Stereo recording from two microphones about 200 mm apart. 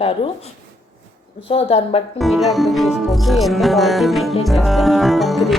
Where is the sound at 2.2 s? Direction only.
Centre (ahead or behind).